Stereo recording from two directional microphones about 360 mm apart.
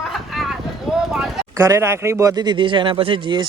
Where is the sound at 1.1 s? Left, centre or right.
Centre.